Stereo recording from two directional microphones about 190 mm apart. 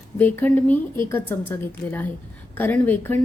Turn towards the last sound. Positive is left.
turn(degrees=10)  # may be behind; listen again after turning